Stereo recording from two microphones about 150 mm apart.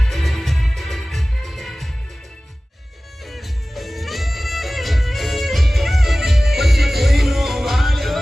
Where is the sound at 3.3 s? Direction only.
Centre (ahead or behind).